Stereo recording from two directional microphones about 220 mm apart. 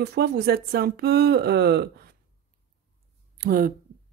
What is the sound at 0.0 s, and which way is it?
Speech, 50° right (ahead or behind).